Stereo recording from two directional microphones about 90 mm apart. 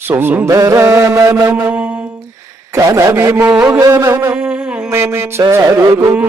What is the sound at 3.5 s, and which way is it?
Mantra, 20° right (ahead or behind).